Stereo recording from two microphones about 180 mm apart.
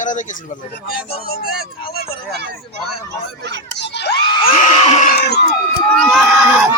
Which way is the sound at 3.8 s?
70° left (ahead or behind).